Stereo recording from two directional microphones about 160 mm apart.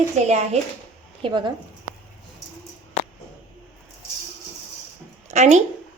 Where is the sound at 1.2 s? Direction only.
30° right (ahead or behind).